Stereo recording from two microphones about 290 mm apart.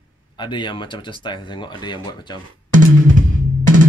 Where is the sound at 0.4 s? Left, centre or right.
Centre.